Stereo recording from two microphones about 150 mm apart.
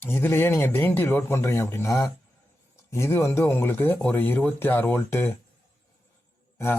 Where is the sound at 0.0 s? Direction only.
15° left (ahead or behind).